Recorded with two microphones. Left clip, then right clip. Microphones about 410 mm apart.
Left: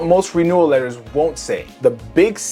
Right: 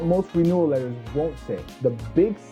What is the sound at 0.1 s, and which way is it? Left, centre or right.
Speech, centre.